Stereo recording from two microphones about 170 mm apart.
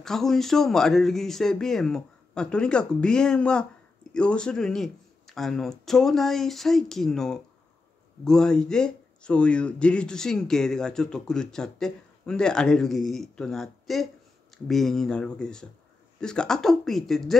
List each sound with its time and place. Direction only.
0.0 s speech: centre (ahead or behind)